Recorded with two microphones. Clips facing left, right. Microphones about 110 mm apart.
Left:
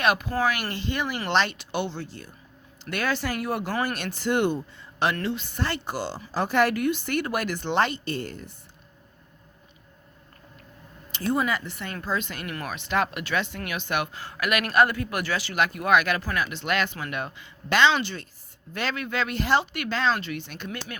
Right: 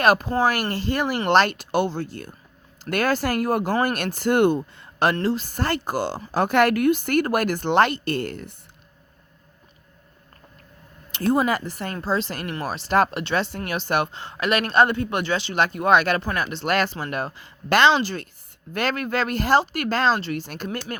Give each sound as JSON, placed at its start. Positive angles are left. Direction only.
{"t": 0.0, "sound": "speech", "side_deg": -40}
{"t": 5.1, "sound": "speech", "side_deg": -35}
{"t": 11.1, "sound": "speech", "side_deg": -40}